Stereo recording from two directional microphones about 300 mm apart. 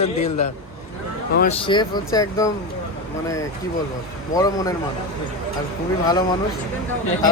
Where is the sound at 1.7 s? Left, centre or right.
Centre.